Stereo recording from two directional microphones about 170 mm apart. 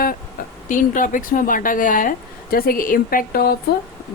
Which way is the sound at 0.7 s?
50° left (ahead or behind).